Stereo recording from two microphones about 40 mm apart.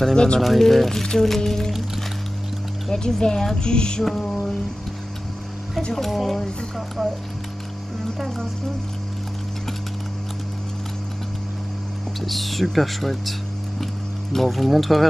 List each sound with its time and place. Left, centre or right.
0.0 s music: centre
0.4 s speech: centre
2.9 s speech: centre
3.5 s music: left
5.9 s speech: centre
12.2 s speech: centre
14.3 s speech: centre